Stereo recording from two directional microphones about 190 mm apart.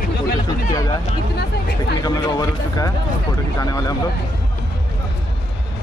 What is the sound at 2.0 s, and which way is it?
Speech, 20° left (ahead or behind).